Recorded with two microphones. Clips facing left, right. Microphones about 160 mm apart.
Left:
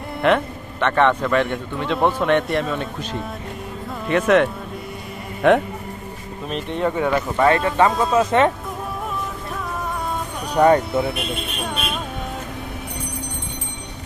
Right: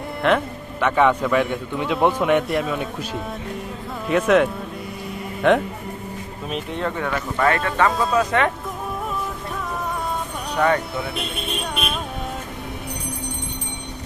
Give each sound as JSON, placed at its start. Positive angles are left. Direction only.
{"t": 0.2, "sound": "a man's voice", "side_deg": 0}
{"t": 6.8, "sound": "speech", "side_deg": 15}
{"t": 10.6, "sound": "speech", "side_deg": 35}